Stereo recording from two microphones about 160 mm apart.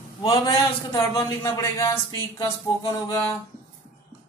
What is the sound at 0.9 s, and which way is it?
Speech, 20° left (ahead or behind).